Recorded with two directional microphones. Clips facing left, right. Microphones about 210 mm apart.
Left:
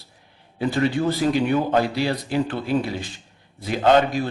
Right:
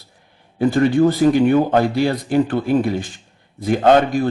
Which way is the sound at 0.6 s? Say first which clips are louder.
Right 7 dB; 50° right (ahead or behind).